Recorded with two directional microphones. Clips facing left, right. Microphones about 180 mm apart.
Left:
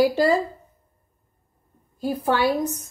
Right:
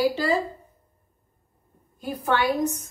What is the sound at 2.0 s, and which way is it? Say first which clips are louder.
Speech: left 3 dB; 30° left (ahead or behind).